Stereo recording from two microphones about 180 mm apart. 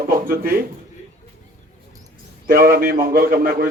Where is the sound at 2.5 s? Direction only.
55° right (ahead or behind).